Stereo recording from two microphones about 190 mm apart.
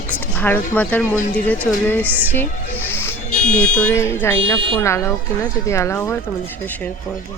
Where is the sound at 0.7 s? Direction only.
10° left (ahead or behind).